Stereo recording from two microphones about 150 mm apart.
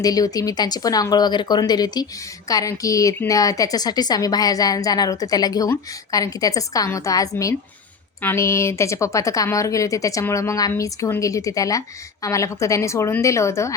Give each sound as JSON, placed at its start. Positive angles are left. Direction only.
{"t": 0.0, "sound": "a woman's voice", "side_deg": 25}